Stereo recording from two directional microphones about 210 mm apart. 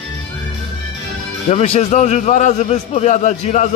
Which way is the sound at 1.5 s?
30° left (ahead or behind).